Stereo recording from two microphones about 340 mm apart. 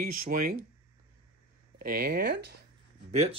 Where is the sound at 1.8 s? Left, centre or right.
Right.